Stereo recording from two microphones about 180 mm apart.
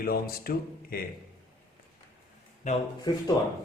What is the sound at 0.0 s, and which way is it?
Speech, 55° left (ahead or behind).